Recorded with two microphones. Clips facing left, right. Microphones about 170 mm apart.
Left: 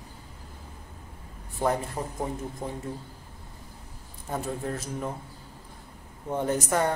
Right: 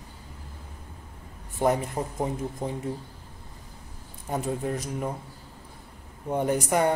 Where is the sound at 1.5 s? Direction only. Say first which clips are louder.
Right 3 dB; 20° right (ahead or behind).